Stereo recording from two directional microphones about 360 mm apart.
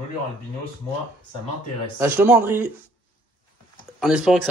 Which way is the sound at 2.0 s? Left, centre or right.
Centre.